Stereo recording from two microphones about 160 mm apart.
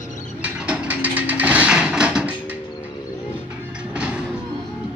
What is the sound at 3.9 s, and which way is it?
Music, 5° right (ahead or behind).